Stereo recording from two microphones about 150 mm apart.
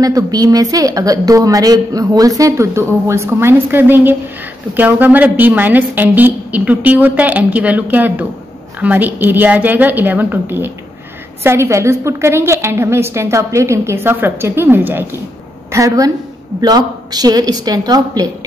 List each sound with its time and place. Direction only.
0.0 s a woman's voice: 25° right (ahead or behind)